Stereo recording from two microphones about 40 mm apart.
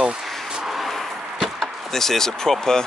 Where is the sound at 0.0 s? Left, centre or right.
Right.